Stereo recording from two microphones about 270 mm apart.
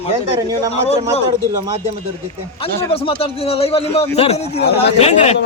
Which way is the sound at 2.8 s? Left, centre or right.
Centre.